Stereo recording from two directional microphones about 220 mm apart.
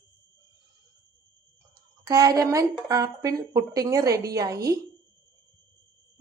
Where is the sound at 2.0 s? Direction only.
15° right (ahead or behind).